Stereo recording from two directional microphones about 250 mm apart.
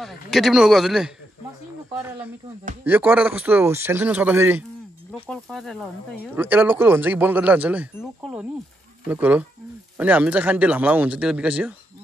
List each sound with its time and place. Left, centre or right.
0.0 s speech: centre